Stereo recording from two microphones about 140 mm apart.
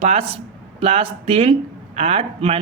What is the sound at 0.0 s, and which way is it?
Speech, 45° right (ahead or behind).